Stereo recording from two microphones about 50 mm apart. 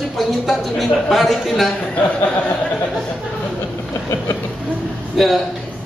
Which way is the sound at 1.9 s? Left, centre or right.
Left.